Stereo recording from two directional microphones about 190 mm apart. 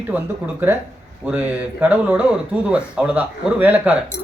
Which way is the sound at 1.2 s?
10° right (ahead or behind).